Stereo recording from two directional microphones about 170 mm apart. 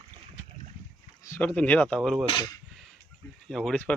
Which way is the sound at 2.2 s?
30° left (ahead or behind).